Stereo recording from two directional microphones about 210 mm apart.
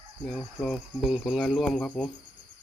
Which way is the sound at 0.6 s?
Centre (ahead or behind).